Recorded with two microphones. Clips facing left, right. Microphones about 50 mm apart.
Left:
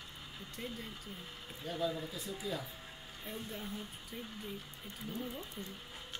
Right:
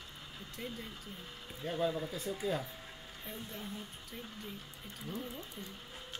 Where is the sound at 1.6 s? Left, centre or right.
Right.